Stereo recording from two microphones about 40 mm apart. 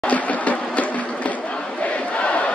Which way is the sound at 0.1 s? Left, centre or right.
Left.